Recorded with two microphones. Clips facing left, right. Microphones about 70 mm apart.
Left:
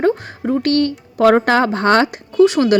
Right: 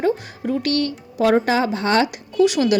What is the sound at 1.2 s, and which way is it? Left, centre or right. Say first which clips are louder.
Speech: left 5 dB; left.